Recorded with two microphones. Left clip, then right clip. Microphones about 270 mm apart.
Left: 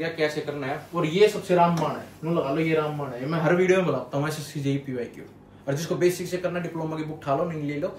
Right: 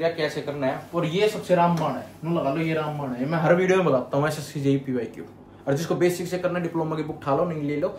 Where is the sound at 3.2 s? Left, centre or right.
Centre.